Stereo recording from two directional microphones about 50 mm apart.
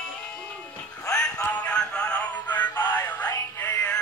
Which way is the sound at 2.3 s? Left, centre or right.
Left.